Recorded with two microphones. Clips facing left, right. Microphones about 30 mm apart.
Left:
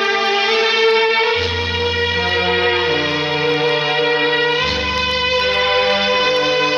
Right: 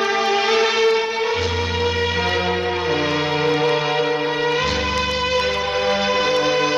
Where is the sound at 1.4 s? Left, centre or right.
Left.